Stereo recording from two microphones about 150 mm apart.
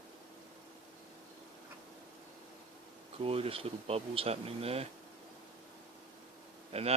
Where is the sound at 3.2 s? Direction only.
40° right (ahead or behind).